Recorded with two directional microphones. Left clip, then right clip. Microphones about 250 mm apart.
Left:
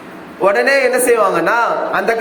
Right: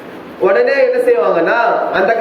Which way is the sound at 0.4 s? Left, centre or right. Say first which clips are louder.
Right 1 dB; left.